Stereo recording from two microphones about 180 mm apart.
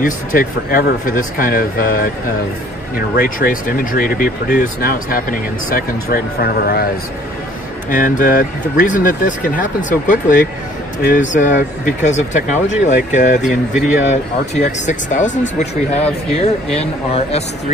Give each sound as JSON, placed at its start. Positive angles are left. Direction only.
{"t": 0.0, "sound": "speech", "side_deg": 50}
{"t": 3.2, "sound": "speech", "side_deg": 50}
{"t": 8.0, "sound": "speech", "side_deg": 50}